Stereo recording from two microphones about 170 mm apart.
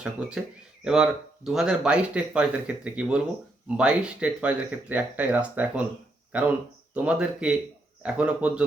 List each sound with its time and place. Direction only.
0.0 s speech: 5° right (ahead or behind)